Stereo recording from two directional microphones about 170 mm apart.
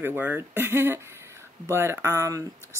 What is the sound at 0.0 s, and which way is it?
Speech, 10° right (ahead or behind).